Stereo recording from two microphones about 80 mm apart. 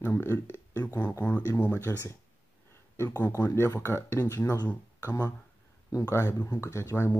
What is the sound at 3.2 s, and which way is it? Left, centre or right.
Speech, left.